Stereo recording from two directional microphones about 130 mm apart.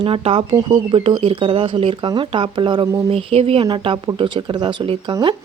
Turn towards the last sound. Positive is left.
turn(degrees=-30)  # may be behind; listen again after turning